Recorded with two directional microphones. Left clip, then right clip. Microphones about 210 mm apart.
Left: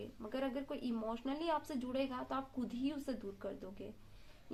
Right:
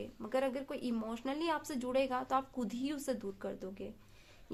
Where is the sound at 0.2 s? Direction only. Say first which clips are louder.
Right 6 dB; 40° right (ahead or behind).